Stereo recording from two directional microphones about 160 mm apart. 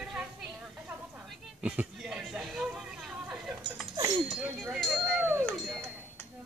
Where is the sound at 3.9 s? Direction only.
25° right (ahead or behind).